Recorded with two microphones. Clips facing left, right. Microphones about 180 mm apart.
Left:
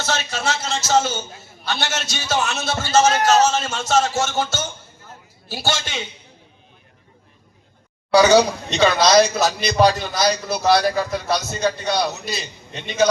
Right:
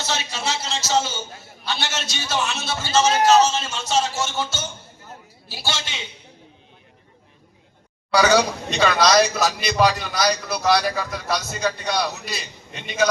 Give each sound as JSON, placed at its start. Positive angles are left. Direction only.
{"t": 0.0, "sound": "a sound", "side_deg": 50}
{"t": 1.6, "sound": "a man's voice", "side_deg": 45}
{"t": 8.1, "sound": "a man's voice", "side_deg": 25}